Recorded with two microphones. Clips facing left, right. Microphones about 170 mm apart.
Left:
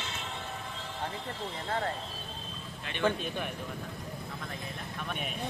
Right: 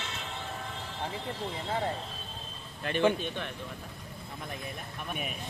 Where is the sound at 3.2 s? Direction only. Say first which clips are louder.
Even; 5° left (ahead or behind).